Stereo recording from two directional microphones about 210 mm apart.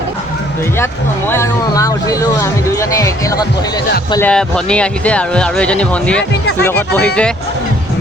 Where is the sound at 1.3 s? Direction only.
15° left (ahead or behind).